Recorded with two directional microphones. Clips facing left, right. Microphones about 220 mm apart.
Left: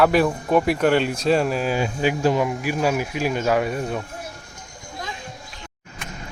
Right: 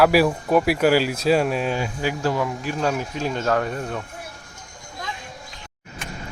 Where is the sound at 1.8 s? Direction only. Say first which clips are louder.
Left 4 dB; 20° left (ahead or behind).